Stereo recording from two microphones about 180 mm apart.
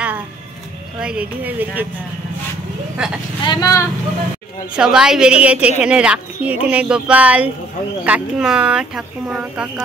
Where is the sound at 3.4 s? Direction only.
20° left (ahead or behind).